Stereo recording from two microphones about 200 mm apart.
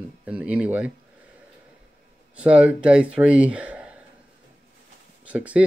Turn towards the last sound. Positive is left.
turn(degrees=-5)  # may be behind; listen again after turning